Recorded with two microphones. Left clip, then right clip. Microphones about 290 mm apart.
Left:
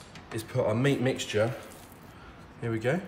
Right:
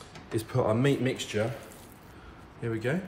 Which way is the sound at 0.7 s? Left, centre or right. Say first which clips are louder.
Even; centre.